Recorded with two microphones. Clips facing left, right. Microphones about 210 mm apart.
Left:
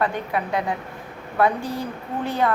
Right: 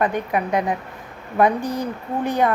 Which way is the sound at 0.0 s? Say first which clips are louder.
Right 3 dB; 20° right (ahead or behind).